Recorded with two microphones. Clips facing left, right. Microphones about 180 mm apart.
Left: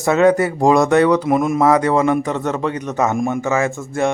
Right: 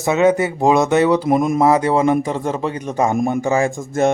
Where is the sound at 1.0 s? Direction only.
25° right (ahead or behind).